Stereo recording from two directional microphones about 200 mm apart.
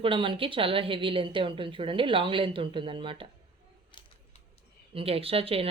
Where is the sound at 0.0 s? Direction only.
25° right (ahead or behind).